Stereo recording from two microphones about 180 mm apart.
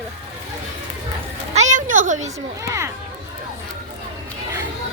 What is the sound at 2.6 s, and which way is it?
Speech, 15° right (ahead or behind).